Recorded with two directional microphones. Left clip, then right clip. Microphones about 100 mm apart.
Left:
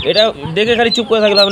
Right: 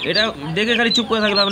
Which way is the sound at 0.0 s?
45° left (ahead or behind).